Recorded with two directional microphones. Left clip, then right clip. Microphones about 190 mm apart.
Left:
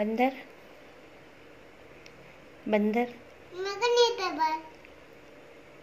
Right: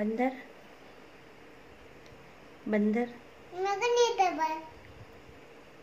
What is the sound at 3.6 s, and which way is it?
Speech, 10° right (ahead or behind).